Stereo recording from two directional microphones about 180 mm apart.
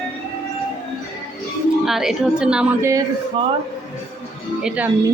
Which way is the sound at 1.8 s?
Centre (ahead or behind).